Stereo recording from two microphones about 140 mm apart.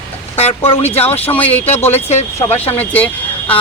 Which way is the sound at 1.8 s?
15° left (ahead or behind).